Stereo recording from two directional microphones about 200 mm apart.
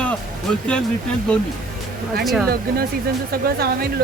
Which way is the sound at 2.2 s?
Centre (ahead or behind).